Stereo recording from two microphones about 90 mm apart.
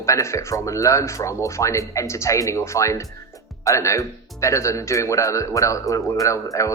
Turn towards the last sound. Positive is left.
turn(degrees=35)  # may be behind; listen again after turning